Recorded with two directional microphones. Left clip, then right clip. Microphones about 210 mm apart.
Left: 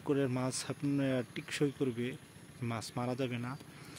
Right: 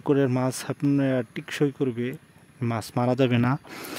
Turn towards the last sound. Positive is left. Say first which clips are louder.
# right 17 dB
turn(degrees=-50)  # may be behind; listen again after turning